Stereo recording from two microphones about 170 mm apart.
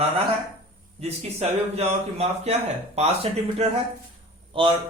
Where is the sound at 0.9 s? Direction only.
40° right (ahead or behind).